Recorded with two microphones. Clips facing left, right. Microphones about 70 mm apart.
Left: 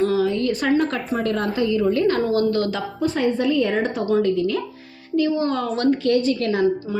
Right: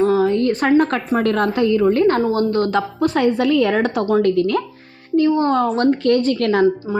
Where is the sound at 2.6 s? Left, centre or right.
Right.